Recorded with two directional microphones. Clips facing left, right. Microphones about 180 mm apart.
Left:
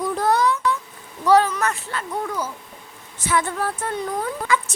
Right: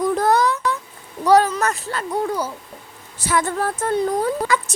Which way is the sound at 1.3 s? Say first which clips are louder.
Right 2 dB; 40° right (ahead or behind).